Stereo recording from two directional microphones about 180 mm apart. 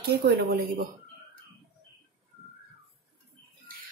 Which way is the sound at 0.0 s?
60° right (ahead or behind).